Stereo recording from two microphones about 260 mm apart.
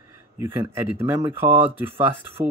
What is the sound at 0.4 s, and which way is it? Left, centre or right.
Speech, centre.